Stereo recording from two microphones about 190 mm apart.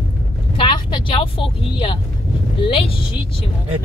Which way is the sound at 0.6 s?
25° left (ahead or behind).